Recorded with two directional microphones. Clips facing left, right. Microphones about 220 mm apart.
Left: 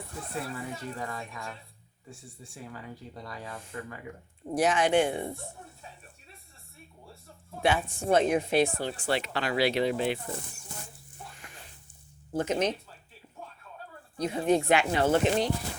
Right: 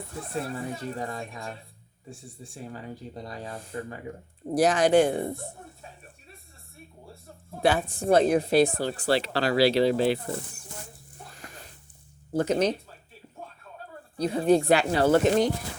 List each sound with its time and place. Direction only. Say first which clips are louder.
0.4 s speech: right 4 dB; 35° right (ahead or behind)
2.6 s speech: right 4 dB; 35° right (ahead or behind)
7.6 s speech: right 3 dB; 35° right (ahead or behind)
11.2 s a sound: right 2 dB; 40° right (ahead or behind)
12.3 s speech: right 4 dB; 35° right (ahead or behind)
14.2 s speech: right 4 dB; 35° right (ahead or behind)